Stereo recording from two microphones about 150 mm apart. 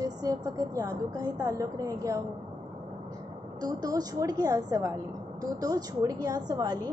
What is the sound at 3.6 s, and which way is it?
A woman's voice, 25° right (ahead or behind).